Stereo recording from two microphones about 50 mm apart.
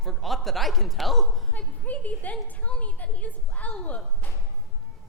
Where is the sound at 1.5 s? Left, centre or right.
Left.